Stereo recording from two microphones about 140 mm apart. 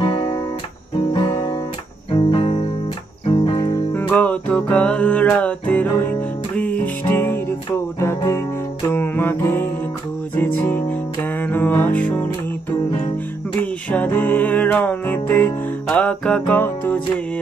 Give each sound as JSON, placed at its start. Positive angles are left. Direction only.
{"t": 0.0, "sound": "guitar", "side_deg": 35}
{"t": 0.9, "sound": "music", "side_deg": 35}
{"t": 4.1, "sound": "music", "side_deg": 10}
{"t": 13.6, "sound": "music", "side_deg": 10}